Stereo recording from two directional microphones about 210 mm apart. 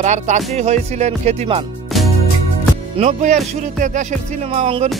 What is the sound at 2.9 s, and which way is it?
Speech, 35° right (ahead or behind).